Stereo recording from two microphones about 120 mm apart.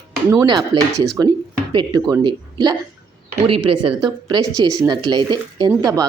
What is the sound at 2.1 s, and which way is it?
Speech, 35° right (ahead or behind).